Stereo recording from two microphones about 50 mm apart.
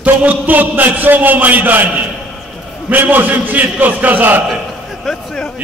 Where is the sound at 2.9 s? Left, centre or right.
Right.